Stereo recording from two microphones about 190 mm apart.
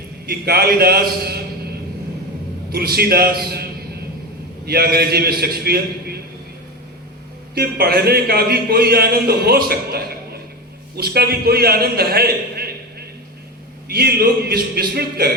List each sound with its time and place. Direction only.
0.3 s speech: 55° right (ahead or behind)
2.7 s speech: 55° right (ahead or behind)
7.5 s a man's voice: 55° right (ahead or behind)